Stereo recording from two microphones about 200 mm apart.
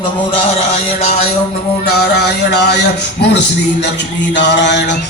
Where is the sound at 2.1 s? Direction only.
55° left (ahead or behind).